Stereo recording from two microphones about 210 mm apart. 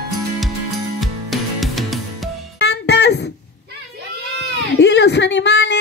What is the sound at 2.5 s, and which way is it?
Music, 55° left (ahead or behind).